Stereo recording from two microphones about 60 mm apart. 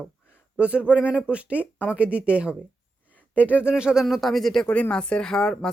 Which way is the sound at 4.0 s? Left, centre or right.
Centre.